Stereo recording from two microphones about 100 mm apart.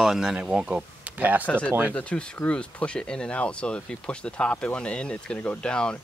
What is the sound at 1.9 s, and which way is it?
Speech, 10° left (ahead or behind).